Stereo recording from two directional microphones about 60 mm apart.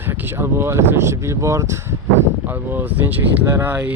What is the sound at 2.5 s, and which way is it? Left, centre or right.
Speech, right.